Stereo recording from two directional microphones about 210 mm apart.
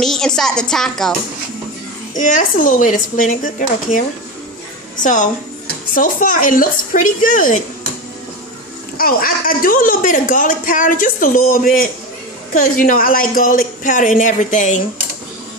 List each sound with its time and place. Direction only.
0.0 s speech: centre (ahead or behind)
2.1 s speech: 35° left (ahead or behind)
5.9 s speech: 40° left (ahead or behind)
8.9 s speech: 45° left (ahead or behind)